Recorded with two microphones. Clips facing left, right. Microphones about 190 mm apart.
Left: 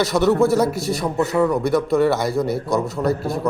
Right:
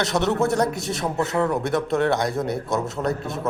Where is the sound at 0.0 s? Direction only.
Centre (ahead or behind).